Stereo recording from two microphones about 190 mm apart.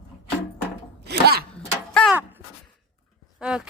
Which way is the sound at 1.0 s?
55° right (ahead or behind).